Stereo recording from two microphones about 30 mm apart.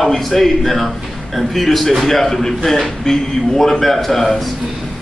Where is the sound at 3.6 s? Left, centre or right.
Centre.